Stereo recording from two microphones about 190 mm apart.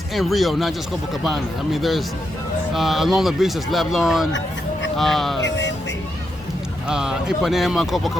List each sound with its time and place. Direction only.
0.1 s speech: centre (ahead or behind)
5.4 s speech: 70° left (ahead or behind)
6.8 s speech: 5° right (ahead or behind)